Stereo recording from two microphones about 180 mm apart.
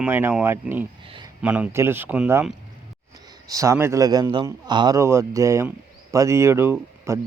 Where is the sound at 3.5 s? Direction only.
15° right (ahead or behind).